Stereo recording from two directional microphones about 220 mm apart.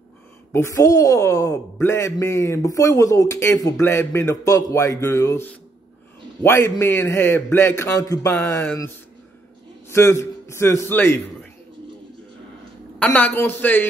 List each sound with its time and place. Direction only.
0.5 s a man's voice: 10° left (ahead or behind)
13.0 s a man's voice: 5° left (ahead or behind)